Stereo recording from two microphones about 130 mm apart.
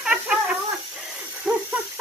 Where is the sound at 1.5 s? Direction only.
10° right (ahead or behind).